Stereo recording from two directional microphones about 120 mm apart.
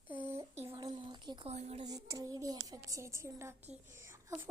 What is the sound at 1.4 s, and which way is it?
Speech, 65° right (ahead or behind).